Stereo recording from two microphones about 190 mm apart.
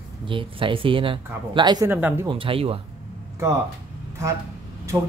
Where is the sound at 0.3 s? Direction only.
25° right (ahead or behind).